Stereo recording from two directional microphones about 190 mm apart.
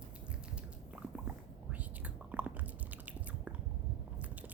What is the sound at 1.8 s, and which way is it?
Whispering, 5° right (ahead or behind).